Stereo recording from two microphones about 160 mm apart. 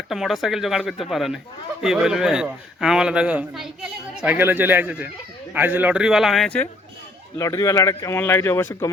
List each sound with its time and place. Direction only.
0.1 s a man's voice: centre (ahead or behind)
7.3 s speech: 20° left (ahead or behind)